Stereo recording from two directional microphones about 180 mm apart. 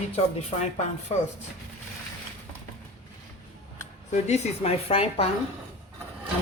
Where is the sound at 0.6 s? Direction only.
40° left (ahead or behind).